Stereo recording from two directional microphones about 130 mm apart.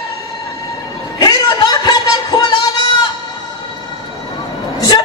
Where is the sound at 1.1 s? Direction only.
30° left (ahead or behind).